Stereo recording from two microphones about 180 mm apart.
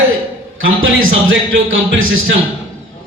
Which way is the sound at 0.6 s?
90° right.